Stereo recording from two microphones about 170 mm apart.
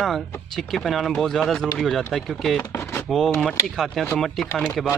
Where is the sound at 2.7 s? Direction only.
15° left (ahead or behind).